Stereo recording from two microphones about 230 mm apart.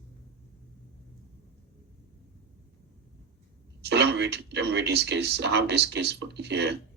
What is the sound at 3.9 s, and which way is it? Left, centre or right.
Speech, right.